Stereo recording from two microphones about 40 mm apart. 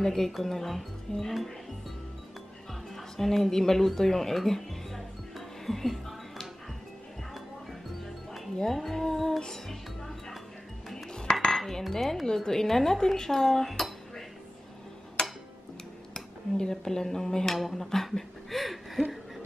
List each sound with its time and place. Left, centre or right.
0.0 s speech: centre
3.2 s speech: centre
5.7 s music: centre
8.3 s music: centre
11.1 s cutlery: centre
11.5 s cutlery: centre
12.0 s speech: centre
15.2 s a sound: centre
16.1 s speech: centre